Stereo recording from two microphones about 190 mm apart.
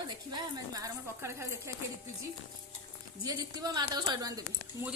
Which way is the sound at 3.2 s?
20° right (ahead or behind).